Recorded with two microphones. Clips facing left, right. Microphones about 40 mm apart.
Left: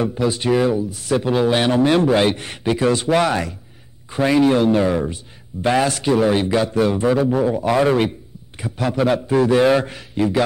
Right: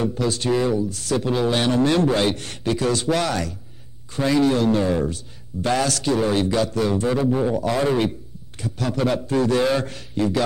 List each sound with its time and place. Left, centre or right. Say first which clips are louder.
0.0 s speech: left 3 dB; centre